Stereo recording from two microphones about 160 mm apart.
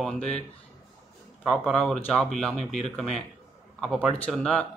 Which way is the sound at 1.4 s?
Centre (ahead or behind).